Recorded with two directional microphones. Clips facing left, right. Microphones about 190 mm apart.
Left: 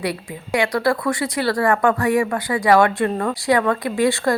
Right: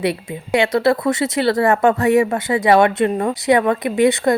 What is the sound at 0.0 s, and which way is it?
A woman's voice, 25° right (ahead or behind).